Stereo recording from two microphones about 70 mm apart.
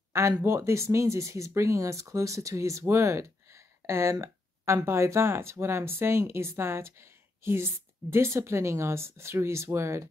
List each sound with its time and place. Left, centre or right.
0.4 s speech: right